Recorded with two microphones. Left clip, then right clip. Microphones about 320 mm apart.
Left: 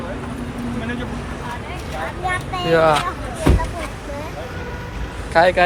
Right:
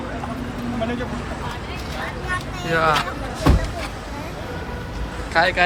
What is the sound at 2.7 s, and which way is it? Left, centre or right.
Speech, centre.